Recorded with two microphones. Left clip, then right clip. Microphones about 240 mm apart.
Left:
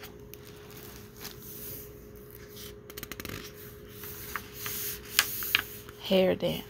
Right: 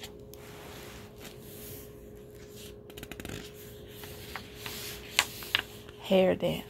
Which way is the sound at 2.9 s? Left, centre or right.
Centre.